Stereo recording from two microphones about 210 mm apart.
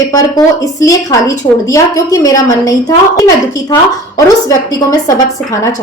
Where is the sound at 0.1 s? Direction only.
15° left (ahead or behind).